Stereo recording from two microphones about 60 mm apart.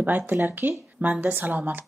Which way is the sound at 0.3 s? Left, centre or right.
Right.